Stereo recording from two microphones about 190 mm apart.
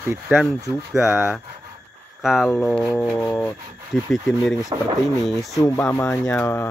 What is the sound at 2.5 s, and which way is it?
Rub, 5° left (ahead or behind).